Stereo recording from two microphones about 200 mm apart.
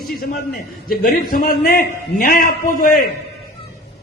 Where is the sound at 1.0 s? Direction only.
45° left (ahead or behind).